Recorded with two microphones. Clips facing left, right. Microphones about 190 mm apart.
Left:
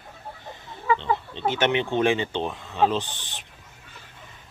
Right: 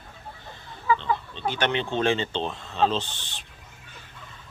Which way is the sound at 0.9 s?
20° left (ahead or behind).